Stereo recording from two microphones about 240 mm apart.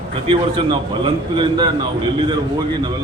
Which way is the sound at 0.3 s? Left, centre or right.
Right.